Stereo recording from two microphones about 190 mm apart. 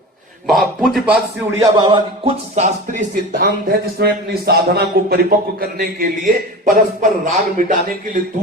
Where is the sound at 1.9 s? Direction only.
35° right (ahead or behind).